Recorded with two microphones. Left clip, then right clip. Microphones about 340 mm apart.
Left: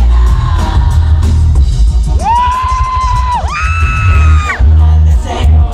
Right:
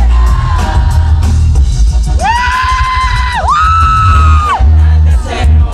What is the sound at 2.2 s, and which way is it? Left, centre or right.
Music, right.